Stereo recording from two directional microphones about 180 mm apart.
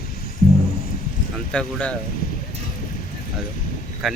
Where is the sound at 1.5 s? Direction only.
5° left (ahead or behind).